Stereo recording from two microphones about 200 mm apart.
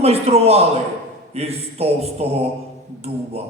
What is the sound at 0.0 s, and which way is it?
A man's voice, 30° right (ahead or behind).